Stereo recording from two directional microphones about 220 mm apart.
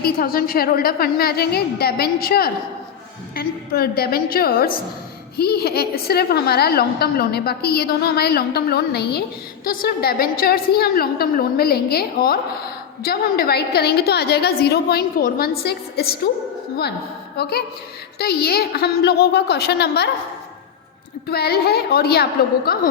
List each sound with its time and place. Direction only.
0.0 s a woman's voice: 40° left (ahead or behind)
17.3 s a woman's voice: 45° left (ahead or behind)
21.2 s a woman's voice: 45° left (ahead or behind)